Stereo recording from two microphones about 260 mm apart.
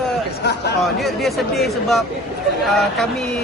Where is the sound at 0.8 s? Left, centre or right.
Centre.